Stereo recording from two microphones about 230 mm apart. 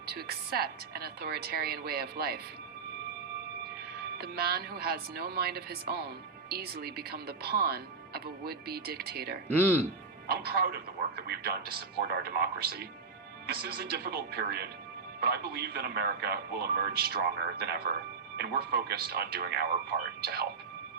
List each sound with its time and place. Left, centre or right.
0.0 s speech: right
3.6 s speech: right
9.6 s speech: centre
10.2 s speech: right